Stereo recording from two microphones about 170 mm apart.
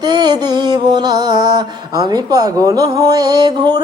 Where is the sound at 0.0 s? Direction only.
25° right (ahead or behind).